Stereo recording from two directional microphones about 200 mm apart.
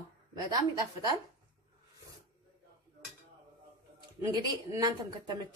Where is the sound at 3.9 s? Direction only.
20° right (ahead or behind).